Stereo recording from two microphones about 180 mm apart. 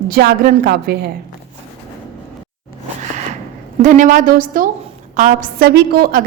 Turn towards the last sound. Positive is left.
turn(degrees=-55)  # may be behind; listen again after turning